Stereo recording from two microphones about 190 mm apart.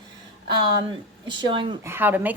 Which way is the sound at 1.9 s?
10° right (ahead or behind).